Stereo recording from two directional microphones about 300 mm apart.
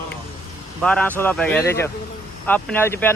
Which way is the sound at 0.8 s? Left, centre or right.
Centre.